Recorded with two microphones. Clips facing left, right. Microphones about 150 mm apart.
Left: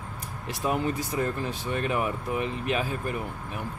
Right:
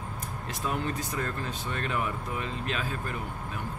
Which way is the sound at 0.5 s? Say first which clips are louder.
Left 5 dB; 15° left (ahead or behind).